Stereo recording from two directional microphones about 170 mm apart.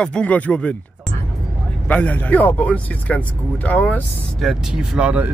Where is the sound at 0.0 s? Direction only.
5° left (ahead or behind).